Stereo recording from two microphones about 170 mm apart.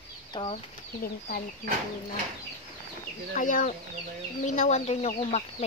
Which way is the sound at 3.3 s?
50° left (ahead or behind).